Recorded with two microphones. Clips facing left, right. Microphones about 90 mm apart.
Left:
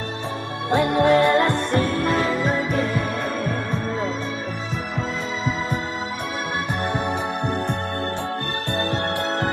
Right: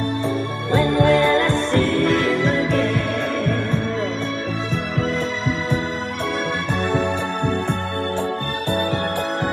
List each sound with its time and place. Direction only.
0.7 s music: 20° left (ahead or behind)
2.4 s music: 5° left (ahead or behind)